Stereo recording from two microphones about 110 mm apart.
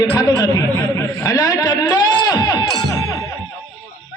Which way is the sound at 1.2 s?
35° left (ahead or behind).